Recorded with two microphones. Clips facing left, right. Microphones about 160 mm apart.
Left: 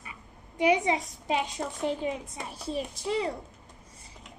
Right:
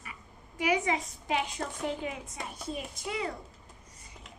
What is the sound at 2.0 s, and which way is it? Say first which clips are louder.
A child's voice: left 5 dB; 30° left (ahead or behind).